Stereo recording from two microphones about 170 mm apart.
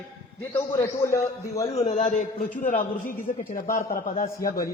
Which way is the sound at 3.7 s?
55° left (ahead or behind).